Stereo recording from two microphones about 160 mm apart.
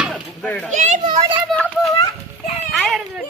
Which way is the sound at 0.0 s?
5° left (ahead or behind).